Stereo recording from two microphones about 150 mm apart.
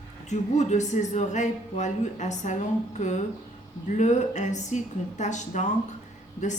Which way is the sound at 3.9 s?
55° left (ahead or behind).